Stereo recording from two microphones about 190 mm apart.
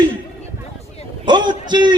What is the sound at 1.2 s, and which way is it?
Speech, 25° right (ahead or behind).